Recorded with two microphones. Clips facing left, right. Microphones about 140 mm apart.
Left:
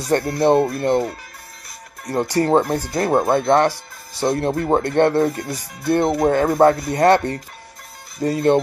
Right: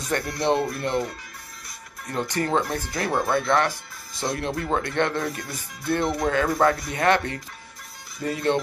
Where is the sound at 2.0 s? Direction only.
35° left (ahead or behind).